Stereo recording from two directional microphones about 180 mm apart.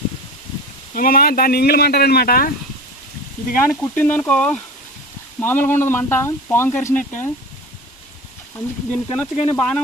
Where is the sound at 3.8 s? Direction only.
10° left (ahead or behind).